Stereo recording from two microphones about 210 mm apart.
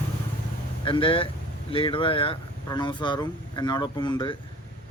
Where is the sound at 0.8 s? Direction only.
25° left (ahead or behind).